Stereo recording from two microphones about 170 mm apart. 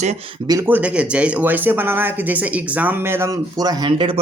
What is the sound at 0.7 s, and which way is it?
A man's voice, 10° right (ahead or behind).